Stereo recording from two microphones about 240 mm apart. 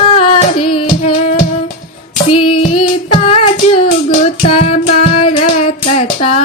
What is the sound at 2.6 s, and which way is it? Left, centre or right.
Child singing, left.